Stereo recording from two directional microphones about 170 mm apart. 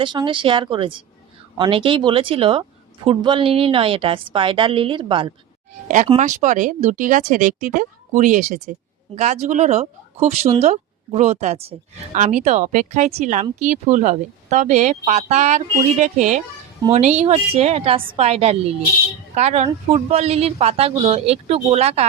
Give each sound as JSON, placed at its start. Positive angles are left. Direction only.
{"t": 0.0, "sound": "a woman's voice", "side_deg": -30}
{"t": 6.1, "sound": "a woman's voice", "side_deg": -45}